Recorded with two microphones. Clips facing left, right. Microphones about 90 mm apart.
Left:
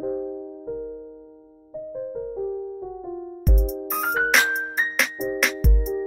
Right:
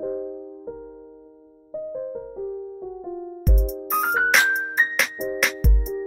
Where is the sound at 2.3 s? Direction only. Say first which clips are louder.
Left 2 dB; 5° left (ahead or behind).